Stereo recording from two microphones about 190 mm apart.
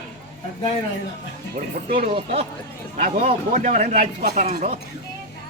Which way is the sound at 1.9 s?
30° right (ahead or behind).